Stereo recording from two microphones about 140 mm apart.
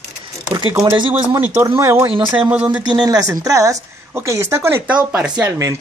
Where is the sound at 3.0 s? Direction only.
25° right (ahead or behind); by 5.5 s 10° right (ahead or behind).